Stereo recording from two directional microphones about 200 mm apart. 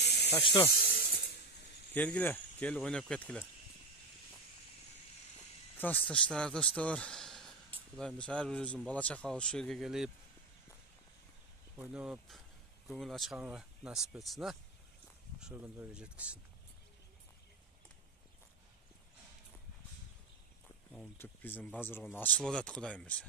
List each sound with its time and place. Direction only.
0.0 s snake: 55° left (ahead or behind)
0.7 s a sound: 50° left (ahead or behind)
2.0 s speech: 10° left (ahead or behind)
5.8 s speech: 10° left (ahead or behind)
11.7 s speech: 5° right (ahead or behind)
20.9 s speech: 5° left (ahead or behind)